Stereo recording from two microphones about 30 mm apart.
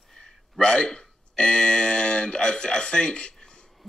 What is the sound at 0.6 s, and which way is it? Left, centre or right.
Speech, left.